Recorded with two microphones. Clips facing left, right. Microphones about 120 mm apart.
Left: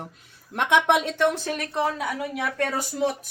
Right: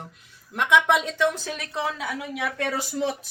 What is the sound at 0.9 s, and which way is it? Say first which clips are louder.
Speech: left 1 dB; 60° left (ahead or behind).